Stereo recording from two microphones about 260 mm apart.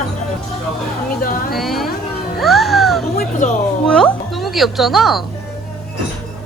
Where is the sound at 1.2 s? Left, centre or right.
Left.